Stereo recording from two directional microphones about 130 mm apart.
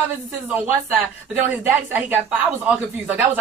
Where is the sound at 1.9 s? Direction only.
15° right (ahead or behind).